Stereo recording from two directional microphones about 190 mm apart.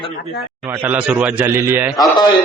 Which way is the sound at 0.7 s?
10° right (ahead or behind).